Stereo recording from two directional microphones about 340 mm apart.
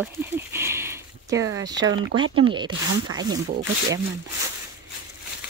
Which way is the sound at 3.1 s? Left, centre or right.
Centre.